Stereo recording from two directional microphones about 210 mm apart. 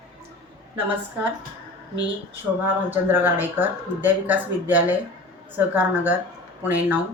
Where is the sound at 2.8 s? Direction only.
10° right (ahead or behind).